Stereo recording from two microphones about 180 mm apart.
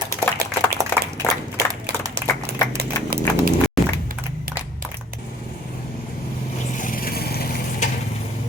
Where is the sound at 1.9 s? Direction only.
65° right (ahead or behind).